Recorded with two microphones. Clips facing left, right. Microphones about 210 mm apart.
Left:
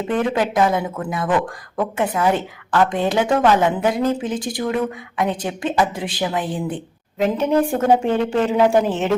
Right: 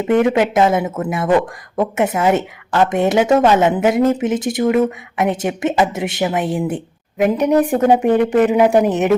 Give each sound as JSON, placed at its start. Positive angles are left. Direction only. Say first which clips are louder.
{"t": 0.5, "sound": "a woman's voice", "louder": "right 4 dB", "side_deg": -25}